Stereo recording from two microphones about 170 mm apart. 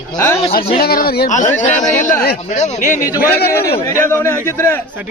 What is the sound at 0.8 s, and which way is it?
Speech, 65° left (ahead or behind).